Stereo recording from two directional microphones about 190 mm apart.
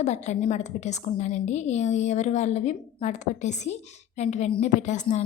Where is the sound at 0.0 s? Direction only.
35° left (ahead or behind).